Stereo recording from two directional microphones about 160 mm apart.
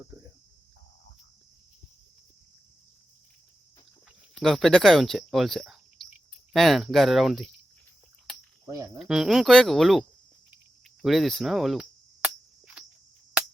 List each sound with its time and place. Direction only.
4.4 s speech: centre (ahead or behind)
8.6 s speech: 20° right (ahead or behind)
9.0 s speech: 5° right (ahead or behind)
11.0 s a sound: centre (ahead or behind)